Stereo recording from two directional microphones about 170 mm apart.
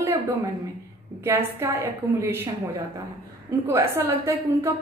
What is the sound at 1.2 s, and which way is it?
A woman's voice, 15° right (ahead or behind).